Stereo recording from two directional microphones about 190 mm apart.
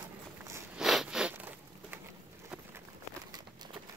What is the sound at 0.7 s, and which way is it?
Zipper, centre (ahead or behind).